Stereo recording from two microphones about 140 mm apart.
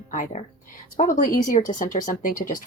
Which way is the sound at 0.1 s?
65° left (ahead or behind).